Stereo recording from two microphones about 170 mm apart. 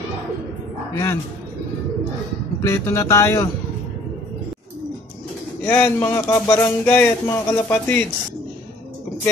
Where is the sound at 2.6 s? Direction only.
15° left (ahead or behind).